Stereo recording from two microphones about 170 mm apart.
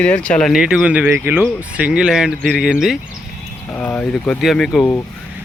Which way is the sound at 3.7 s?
10° left (ahead or behind).